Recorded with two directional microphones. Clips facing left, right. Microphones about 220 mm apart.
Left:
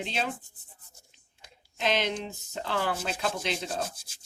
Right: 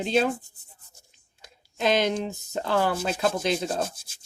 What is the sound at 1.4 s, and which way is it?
Speech, 45° right (ahead or behind).